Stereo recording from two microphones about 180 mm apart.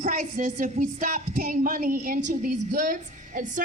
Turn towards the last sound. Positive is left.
turn(degrees=-45)  # may be behind; listen again after turning